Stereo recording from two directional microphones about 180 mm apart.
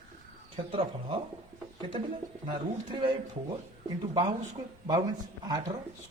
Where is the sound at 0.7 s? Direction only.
30° right (ahead or behind).